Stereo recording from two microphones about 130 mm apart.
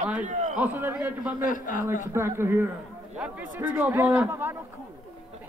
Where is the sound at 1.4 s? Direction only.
90° left.